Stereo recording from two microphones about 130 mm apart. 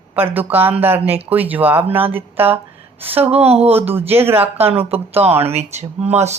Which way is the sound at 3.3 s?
50° right (ahead or behind).